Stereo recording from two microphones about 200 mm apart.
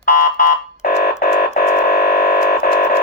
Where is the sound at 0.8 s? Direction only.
50° left (ahead or behind).